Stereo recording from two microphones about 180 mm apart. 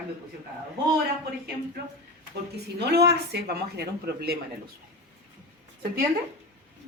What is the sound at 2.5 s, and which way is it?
A woman's voice, 65° right (ahead or behind).